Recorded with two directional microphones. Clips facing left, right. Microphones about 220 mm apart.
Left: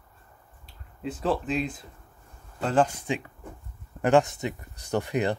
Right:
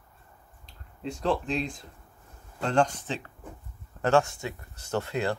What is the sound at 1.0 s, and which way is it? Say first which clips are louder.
Speech: left 1 dB; 5° left (ahead or behind).